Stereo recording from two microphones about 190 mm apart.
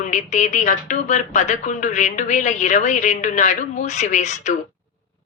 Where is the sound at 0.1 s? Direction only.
40° left (ahead or behind).